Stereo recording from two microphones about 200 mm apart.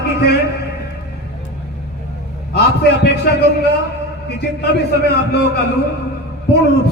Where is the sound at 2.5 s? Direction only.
55° left (ahead or behind).